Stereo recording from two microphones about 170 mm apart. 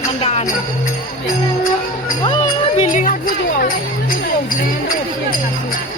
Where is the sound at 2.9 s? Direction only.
50° left (ahead or behind).